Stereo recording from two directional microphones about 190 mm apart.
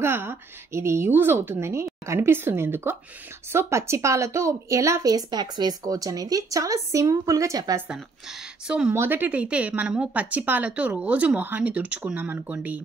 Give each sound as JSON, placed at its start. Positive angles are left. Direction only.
{"t": 0.0, "sound": "speech", "side_deg": -10}
{"t": 8.6, "sound": "speech", "side_deg": -5}